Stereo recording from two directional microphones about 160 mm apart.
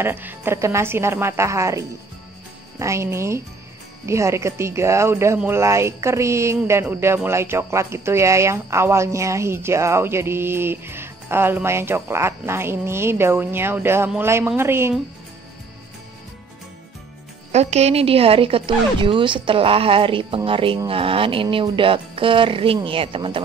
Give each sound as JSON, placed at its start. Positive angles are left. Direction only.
{"t": 0.0, "sound": "speech", "side_deg": -15}
{"t": 17.5, "sound": "a woman's voice", "side_deg": -45}